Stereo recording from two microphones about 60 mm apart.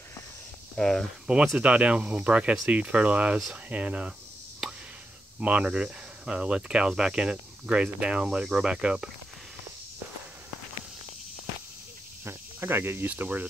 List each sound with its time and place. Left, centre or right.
0.7 s speech: centre
1.2 s speech: centre
5.4 s cricket: centre
12.3 s speech: right